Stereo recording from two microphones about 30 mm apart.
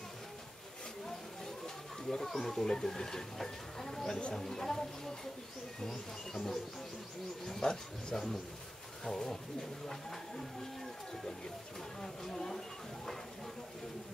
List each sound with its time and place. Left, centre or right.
2.0 s speech: centre
6.3 s speech: centre
7.7 s speech: centre
12.0 s speech: centre